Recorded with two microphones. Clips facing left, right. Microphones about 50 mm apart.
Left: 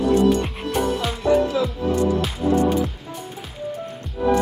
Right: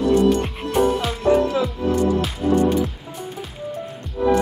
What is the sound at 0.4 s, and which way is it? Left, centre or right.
Music, centre.